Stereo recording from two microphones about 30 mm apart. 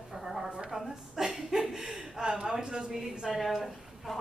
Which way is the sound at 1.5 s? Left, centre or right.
Right.